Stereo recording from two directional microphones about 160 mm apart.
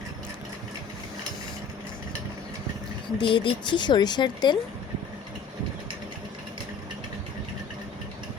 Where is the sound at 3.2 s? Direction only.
30° left (ahead or behind).